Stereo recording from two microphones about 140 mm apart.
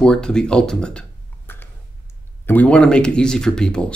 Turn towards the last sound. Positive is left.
turn(degrees=5)  # may be behind; listen again after turning